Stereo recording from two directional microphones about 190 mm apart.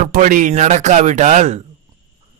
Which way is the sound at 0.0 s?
45° right (ahead or behind).